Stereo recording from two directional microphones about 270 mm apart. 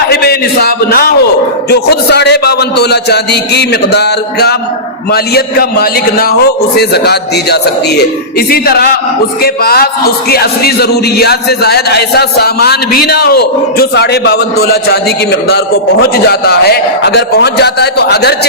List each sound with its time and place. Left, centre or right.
0.1 s a man's voice: left